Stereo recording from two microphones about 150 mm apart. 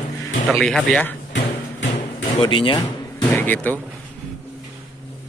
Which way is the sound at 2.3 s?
35° left (ahead or behind).